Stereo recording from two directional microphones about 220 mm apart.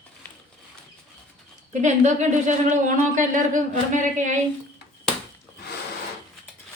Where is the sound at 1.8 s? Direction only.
35° right (ahead or behind).